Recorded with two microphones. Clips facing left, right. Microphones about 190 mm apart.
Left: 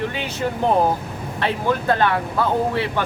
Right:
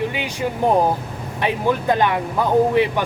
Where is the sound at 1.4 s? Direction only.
15° right (ahead or behind).